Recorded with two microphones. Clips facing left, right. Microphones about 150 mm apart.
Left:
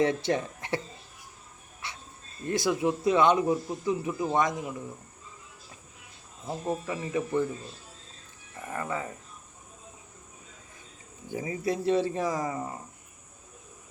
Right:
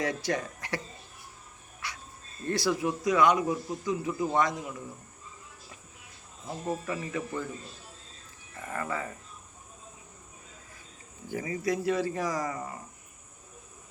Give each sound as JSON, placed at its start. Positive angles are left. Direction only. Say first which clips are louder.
{"t": 0.0, "sound": "speech", "louder": "left 5 dB", "side_deg": 25}
{"t": 1.8, "sound": "dog", "louder": "even", "side_deg": 25}
{"t": 2.5, "sound": "speech", "louder": "left 2 dB", "side_deg": 20}
{"t": 6.7, "sound": "speech", "louder": "left 1 dB", "side_deg": 20}
{"t": 8.7, "sound": "speech", "louder": "left 1 dB", "side_deg": 20}
{"t": 11.3, "sound": "speech", "louder": "even", "side_deg": 20}